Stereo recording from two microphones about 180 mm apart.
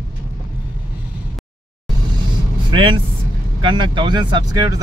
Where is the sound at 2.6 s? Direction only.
25° right (ahead or behind).